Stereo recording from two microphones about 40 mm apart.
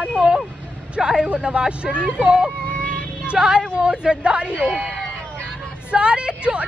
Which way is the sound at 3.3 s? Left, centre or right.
Right.